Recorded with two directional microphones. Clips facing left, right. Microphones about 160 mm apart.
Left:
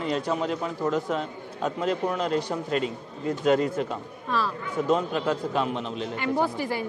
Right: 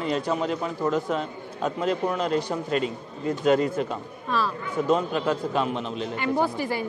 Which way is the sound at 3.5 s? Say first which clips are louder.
Right 1 dB; 15° right (ahead or behind).